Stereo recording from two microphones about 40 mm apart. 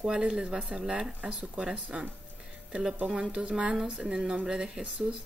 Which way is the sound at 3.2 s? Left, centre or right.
Right.